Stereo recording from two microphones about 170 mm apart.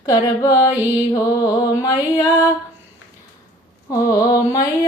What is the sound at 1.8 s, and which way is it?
Mantra, 20° left (ahead or behind).